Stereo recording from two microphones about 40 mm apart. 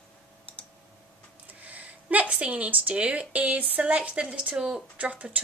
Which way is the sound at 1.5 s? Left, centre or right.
Right.